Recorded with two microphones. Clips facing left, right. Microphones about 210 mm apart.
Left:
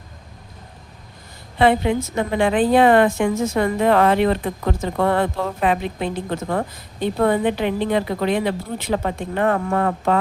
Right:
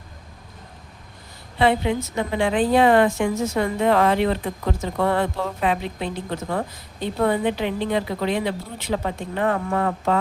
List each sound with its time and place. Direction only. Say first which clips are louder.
1.5 s a woman's voice: left 3 dB; 55° left (ahead or behind)